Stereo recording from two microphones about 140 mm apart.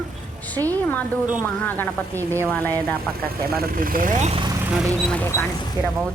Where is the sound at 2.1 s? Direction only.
20° right (ahead or behind).